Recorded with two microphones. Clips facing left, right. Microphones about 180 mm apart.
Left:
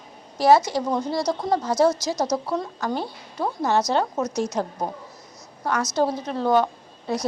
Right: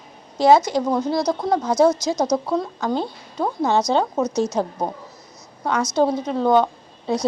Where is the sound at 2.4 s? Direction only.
10° right (ahead or behind).